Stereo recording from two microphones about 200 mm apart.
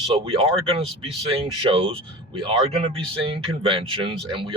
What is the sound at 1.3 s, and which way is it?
Speech, 25° right (ahead or behind).